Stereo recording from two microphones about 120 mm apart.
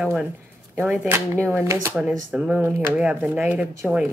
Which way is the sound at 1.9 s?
10° right (ahead or behind).